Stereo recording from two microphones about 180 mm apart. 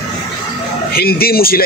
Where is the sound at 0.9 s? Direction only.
60° left (ahead or behind).